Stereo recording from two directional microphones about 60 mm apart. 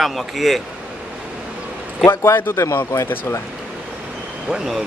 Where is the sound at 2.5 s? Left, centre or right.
Left.